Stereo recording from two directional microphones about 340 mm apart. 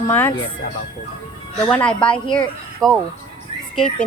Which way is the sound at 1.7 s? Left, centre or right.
Centre.